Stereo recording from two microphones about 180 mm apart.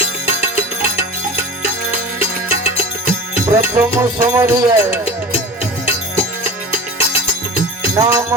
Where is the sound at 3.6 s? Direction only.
15° right (ahead or behind).